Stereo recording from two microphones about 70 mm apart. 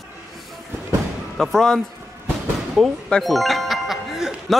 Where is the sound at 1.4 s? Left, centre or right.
Centre.